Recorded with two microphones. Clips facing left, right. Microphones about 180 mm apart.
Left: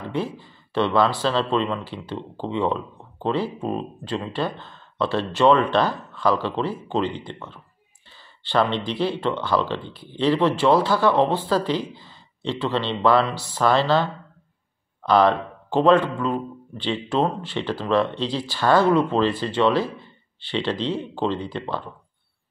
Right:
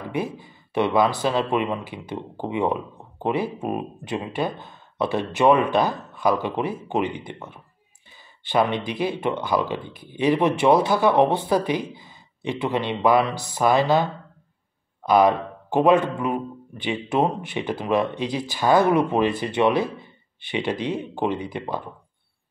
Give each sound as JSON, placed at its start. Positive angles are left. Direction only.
{"t": 0.1, "sound": "speech", "side_deg": -15}